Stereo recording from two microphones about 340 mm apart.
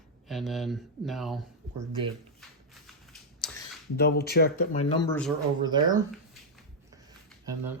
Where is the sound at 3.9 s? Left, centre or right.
Left.